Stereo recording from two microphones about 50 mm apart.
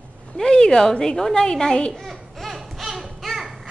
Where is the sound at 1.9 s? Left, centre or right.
Centre.